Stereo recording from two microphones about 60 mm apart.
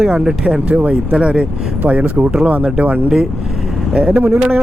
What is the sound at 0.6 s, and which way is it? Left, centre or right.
Speech, right.